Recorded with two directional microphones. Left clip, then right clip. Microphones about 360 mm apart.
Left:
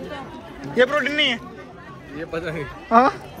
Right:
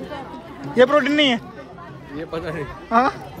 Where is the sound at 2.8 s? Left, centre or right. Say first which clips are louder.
Left 2 dB; centre.